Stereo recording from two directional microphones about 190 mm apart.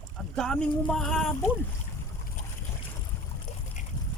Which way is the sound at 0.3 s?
5° left (ahead or behind).